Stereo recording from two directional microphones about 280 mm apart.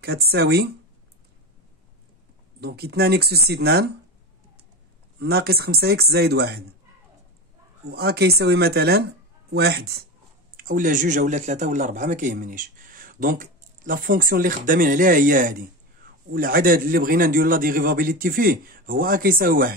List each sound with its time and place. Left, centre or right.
0.0 s speech: right
2.6 s speech: right
5.2 s speech: right
7.9 s speech: right